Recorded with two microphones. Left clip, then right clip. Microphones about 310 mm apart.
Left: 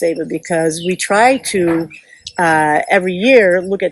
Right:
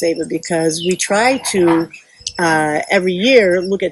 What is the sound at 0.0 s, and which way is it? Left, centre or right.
Speech, centre.